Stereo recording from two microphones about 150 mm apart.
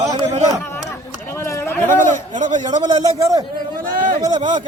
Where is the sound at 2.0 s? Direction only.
55° right (ahead or behind).